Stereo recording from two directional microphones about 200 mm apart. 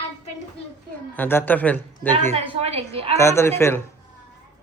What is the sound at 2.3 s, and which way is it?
Speech, 30° right (ahead or behind).